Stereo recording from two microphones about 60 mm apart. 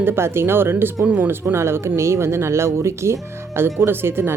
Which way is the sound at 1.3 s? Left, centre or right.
Right.